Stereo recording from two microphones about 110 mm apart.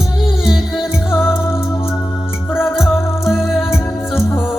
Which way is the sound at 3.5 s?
5° right (ahead or behind).